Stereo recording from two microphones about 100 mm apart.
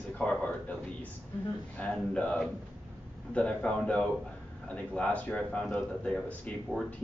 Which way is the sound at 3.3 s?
10° left (ahead or behind).